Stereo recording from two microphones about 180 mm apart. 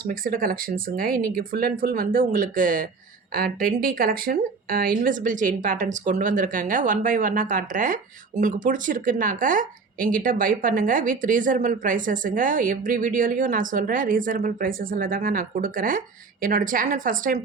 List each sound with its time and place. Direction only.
0.1 s speech: 50° right (ahead or behind)